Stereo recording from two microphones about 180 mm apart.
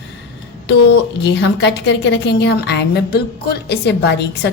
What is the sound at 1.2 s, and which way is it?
A woman's voice, 75° left (ahead or behind).